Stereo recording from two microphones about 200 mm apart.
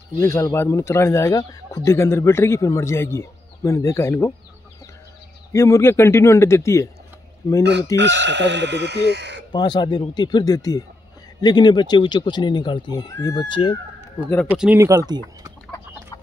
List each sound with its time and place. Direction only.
0.2 s a man's voice: 15° left (ahead or behind)
5.5 s a man's voice: 15° left (ahead or behind)
8.0 s speech: 60° right (ahead or behind)
9.5 s speech: 20° left (ahead or behind)
14.5 s speech: 10° right (ahead or behind)
15.6 s chicken: 15° left (ahead or behind)